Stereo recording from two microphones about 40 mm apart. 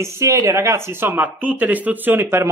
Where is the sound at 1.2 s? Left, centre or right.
Right.